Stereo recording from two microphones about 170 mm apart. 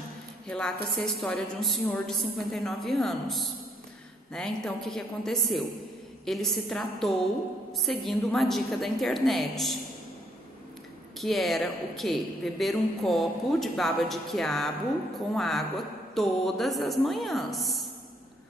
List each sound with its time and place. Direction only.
0.5 s a woman's voice: 5° left (ahead or behind)
11.1 s a woman's voice: centre (ahead or behind)